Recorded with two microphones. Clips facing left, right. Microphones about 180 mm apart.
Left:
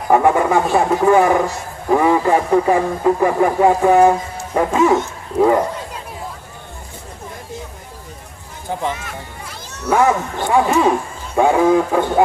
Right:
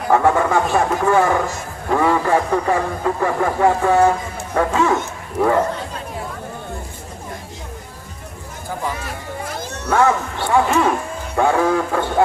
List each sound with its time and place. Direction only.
0.1 s speech: 15° left (ahead or behind)
10.4 s speech: 15° left (ahead or behind)
11.3 s music: 15° left (ahead or behind)